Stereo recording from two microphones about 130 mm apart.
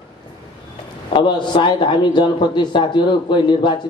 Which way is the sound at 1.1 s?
40° left (ahead or behind).